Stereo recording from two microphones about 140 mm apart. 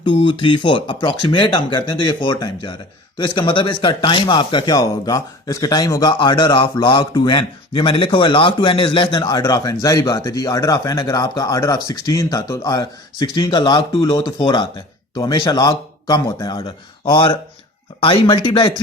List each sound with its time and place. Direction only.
0.0 s speech: 35° left (ahead or behind)